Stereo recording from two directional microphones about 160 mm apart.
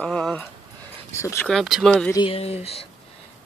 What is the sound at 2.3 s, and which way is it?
Speech, 40° left (ahead or behind).